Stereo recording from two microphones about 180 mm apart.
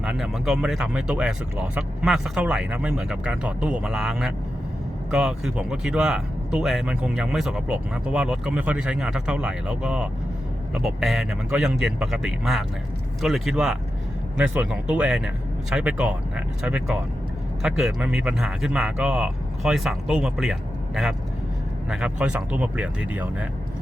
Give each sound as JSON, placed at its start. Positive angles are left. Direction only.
{"t": 0.0, "sound": "speech", "side_deg": -5}